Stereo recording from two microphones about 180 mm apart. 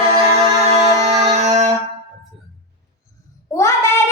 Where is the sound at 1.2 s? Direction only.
40° right (ahead or behind).